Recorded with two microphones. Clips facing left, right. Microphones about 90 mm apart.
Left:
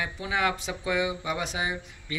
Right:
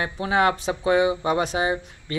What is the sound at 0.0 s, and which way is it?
Speech, 50° right (ahead or behind).